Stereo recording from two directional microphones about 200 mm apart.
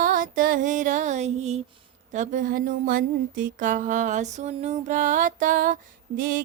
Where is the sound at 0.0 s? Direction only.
40° right (ahead or behind).